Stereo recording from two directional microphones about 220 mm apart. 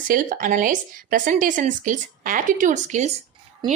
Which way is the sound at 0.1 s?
40° right (ahead or behind).